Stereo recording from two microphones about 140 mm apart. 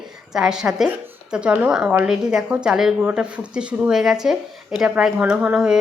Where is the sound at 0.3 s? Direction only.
5° right (ahead or behind).